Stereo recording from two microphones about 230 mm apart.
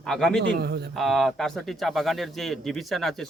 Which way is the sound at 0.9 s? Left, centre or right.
Centre.